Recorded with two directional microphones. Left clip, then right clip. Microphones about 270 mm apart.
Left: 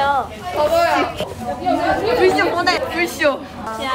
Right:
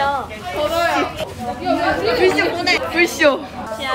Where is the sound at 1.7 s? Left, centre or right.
Centre.